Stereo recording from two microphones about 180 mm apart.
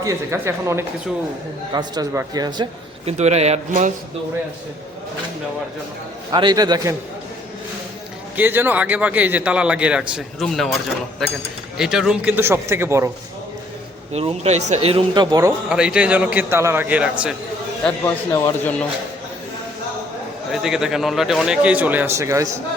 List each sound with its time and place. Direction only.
0.0 s a man's voice: 15° right (ahead or behind)
3.1 s speech: 35° right (ahead or behind)
6.3 s speech: 25° right (ahead or behind)
8.4 s a man's voice: 10° right (ahead or behind)
11.8 s a man's voice: 5° right (ahead or behind)
14.1 s speech: 35° right (ahead or behind)
15.7 s a man's voice: 5° right (ahead or behind)
17.8 s a man's voice: 15° left (ahead or behind)
20.5 s a man's voice: centre (ahead or behind)